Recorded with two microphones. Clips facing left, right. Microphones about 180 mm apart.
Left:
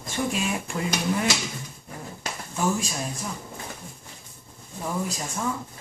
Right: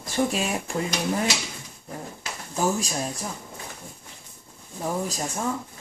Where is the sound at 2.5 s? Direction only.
35° right (ahead or behind).